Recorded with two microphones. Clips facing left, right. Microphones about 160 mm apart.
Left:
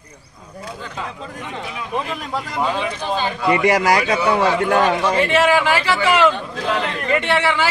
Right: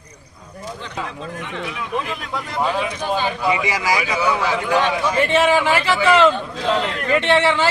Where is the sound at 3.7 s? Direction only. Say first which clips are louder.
Left 5 dB; 60° left (ahead or behind).